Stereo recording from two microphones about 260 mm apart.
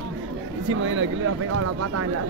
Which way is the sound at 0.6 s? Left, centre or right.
Right.